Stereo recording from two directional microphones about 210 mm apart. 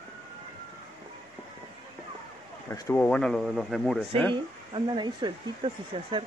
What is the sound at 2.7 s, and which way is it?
Speech, 10° left (ahead or behind).